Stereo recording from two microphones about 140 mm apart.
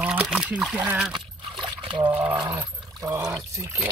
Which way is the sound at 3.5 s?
20° right (ahead or behind).